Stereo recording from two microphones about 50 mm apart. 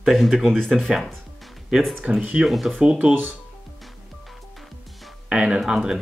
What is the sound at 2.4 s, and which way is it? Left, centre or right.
Speech, centre.